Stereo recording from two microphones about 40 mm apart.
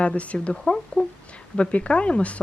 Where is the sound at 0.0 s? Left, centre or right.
Left.